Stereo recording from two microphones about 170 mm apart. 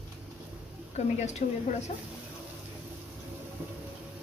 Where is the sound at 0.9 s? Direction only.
40° left (ahead or behind).